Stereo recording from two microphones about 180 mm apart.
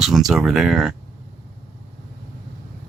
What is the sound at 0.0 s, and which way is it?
Speech, centre (ahead or behind).